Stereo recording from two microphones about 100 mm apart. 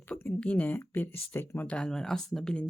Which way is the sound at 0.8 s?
20° left (ahead or behind).